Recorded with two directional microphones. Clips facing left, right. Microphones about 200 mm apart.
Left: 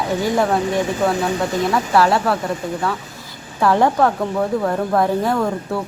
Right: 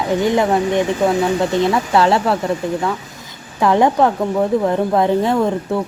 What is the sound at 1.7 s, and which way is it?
Speech, 25° right (ahead or behind).